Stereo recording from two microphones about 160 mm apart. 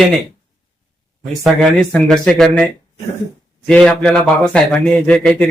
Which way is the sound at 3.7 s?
5° left (ahead or behind).